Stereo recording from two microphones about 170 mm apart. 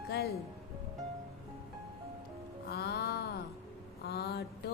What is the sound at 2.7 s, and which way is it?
Music, 65° left (ahead or behind).